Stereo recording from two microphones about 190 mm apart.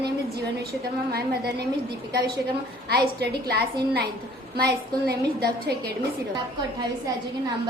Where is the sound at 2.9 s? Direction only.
55° right (ahead or behind).